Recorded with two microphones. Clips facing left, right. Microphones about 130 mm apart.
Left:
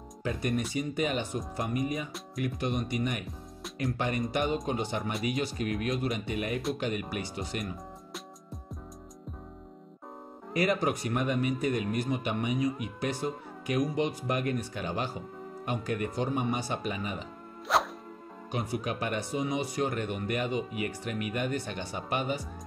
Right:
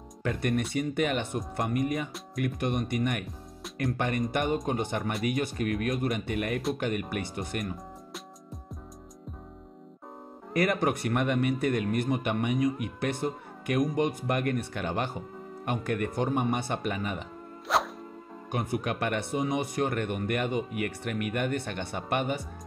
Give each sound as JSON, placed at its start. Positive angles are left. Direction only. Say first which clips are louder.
{"t": 0.2, "sound": "speech", "louder": "right 2 dB", "side_deg": -60}
{"t": 10.5, "sound": "speech", "louder": "right 1 dB", "side_deg": -55}
{"t": 17.7, "sound": "music", "louder": "even", "side_deg": 0}
{"t": 18.5, "sound": "speech", "louder": "right 2 dB", "side_deg": -55}